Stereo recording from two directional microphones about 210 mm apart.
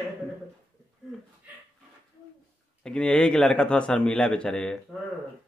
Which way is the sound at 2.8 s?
5° left (ahead or behind).